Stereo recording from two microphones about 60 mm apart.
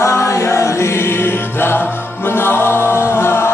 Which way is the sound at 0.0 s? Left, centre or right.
Left.